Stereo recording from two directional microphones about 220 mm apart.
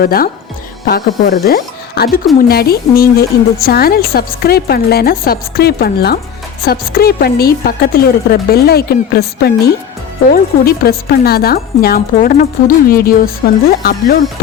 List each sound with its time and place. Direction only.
0.0 s speech: 40° left (ahead or behind)